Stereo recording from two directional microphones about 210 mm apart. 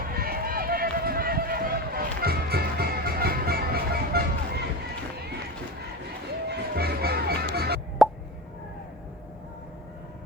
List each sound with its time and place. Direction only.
0.1 s run: 45° right (ahead or behind)
6.5 s music: 50° right (ahead or behind)
8.0 s plop: centre (ahead or behind)